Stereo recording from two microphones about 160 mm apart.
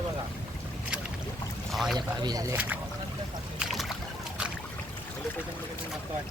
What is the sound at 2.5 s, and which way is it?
Speech, 10° right (ahead or behind).